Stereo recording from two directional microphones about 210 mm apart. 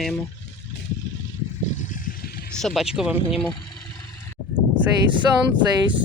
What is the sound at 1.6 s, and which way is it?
Vehicle, 35° left (ahead or behind).